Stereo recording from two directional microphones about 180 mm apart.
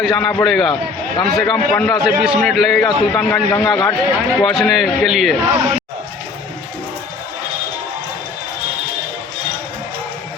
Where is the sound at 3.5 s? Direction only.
20° left (ahead or behind).